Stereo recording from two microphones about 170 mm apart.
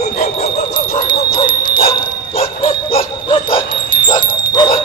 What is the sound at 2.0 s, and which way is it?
Bow-wow, 30° left (ahead or behind).